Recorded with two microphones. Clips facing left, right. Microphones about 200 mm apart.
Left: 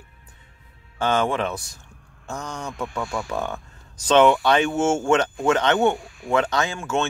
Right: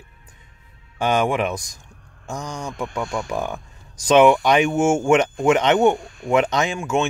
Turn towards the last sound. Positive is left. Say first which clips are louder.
# right 3 dB
turn(degrees=-15)  # may be behind; listen again after turning